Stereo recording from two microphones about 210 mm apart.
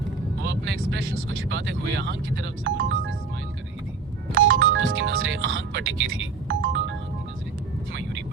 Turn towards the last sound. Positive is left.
turn(degrees=-60)  # may be behind; listen again after turning